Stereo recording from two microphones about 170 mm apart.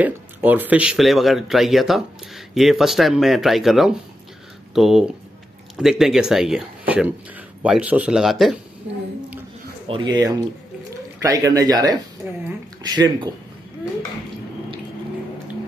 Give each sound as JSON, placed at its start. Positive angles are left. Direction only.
{"t": 0.0, "sound": "speech", "side_deg": -10}
{"t": 9.8, "sound": "speech", "side_deg": -30}
{"t": 12.8, "sound": "speech", "side_deg": -25}